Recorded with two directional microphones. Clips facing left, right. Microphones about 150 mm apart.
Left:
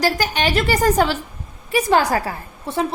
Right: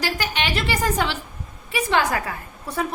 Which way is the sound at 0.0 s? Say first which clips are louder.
Left 6 dB; 40° left (ahead or behind).